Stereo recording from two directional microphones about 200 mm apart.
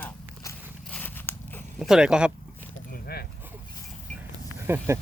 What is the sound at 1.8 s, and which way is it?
Speech, 5° right (ahead or behind).